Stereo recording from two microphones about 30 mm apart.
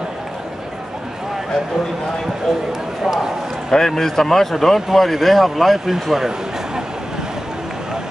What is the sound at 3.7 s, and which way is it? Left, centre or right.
Speech, centre.